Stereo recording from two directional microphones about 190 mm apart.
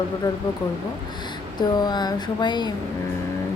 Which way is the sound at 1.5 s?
20° left (ahead or behind).